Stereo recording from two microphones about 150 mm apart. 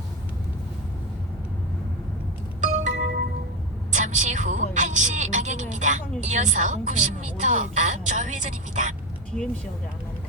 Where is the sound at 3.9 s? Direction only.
55° right (ahead or behind).